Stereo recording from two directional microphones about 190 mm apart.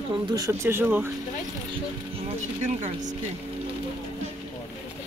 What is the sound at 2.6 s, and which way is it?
Speech, 40° right (ahead or behind).